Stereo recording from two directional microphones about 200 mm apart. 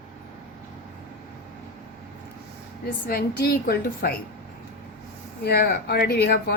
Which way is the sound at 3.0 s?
50° left (ahead or behind).